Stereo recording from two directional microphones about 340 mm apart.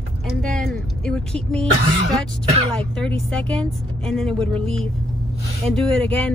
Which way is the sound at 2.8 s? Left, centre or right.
Centre.